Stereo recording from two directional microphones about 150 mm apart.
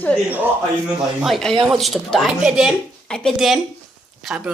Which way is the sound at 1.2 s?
Centre (ahead or behind).